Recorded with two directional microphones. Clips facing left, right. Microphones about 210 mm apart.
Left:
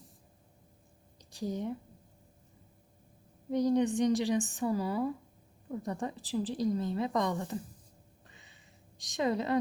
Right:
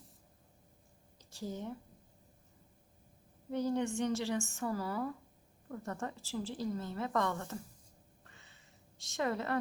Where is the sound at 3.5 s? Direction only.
15° left (ahead or behind).